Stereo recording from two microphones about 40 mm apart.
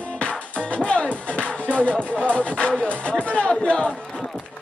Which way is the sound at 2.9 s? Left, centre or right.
Left.